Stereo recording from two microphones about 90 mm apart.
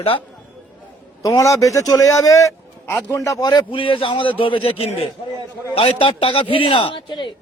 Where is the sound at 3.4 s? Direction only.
50° left (ahead or behind).